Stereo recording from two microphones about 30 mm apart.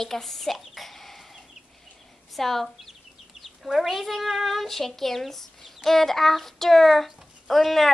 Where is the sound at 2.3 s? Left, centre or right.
Centre.